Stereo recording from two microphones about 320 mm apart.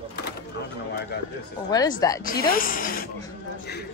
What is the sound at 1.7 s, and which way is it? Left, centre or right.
Speech, centre.